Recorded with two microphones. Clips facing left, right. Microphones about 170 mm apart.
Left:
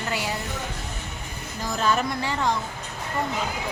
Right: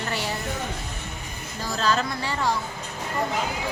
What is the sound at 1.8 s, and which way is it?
Speech, 20° left (ahead or behind).